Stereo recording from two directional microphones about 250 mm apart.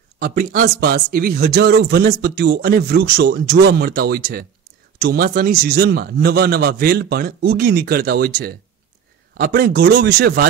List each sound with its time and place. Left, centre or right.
0.2 s speech: right
9.4 s speech: right